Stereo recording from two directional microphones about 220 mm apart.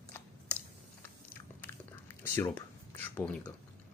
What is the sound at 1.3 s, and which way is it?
Biting, 10° left (ahead or behind).